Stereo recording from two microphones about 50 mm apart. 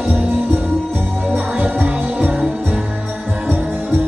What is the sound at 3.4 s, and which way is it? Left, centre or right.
Music, right.